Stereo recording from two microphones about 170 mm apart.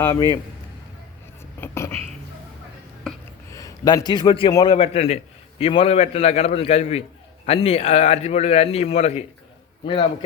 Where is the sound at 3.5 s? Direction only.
20° left (ahead or behind).